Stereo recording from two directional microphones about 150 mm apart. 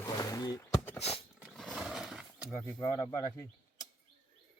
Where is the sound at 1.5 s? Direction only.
Centre (ahead or behind).